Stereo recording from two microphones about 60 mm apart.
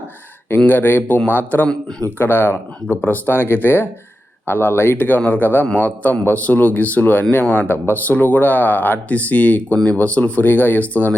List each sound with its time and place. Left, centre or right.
0.7 s speech: left
9.7 s speech: centre